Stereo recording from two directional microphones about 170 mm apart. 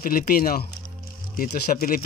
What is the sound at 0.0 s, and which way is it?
Speech, 55° left (ahead or behind).